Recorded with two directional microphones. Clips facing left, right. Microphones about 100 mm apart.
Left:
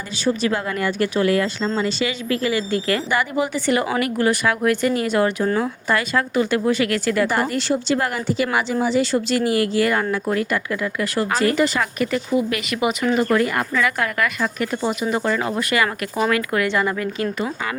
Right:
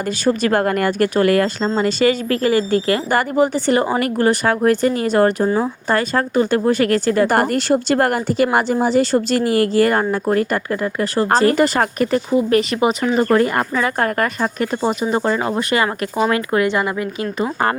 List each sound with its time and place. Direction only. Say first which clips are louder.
0.3 s speech: right 4 dB; 55° right (ahead or behind); by 7.3 s 35° right (ahead or behind)
7.3 s speech: right 5 dB; 50° right (ahead or behind); by 16.6 s 30° right (ahead or behind)
16.6 s speech: right 2 dB; 15° right (ahead or behind)